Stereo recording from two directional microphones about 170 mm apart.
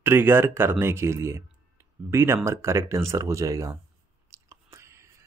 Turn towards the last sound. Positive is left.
turn(degrees=-15)  # may be behind; listen again after turning